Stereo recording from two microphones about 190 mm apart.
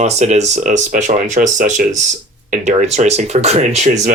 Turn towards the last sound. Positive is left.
turn(degrees=-40)  # may be behind; listen again after turning